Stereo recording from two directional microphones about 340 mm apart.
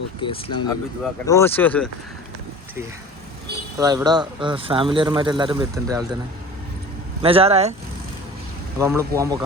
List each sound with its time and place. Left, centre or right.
0.2 s speech: centre
3.8 s speech: centre
7.2 s speech: centre
8.8 s speech: centre